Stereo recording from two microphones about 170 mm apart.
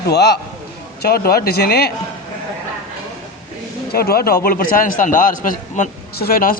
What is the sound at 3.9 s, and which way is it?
A man's voice, 65° left (ahead or behind).